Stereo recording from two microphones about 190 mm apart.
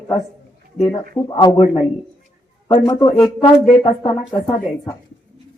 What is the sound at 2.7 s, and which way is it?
Speech, 25° left (ahead or behind).